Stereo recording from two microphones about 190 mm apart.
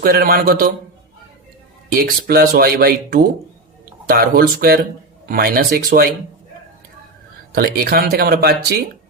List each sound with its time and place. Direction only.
0.0 s speech: 50° right (ahead or behind)
1.9 s speech: 55° right (ahead or behind)
7.5 s speech: 55° right (ahead or behind)